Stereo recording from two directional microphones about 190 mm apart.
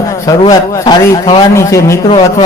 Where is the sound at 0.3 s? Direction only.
20° left (ahead or behind).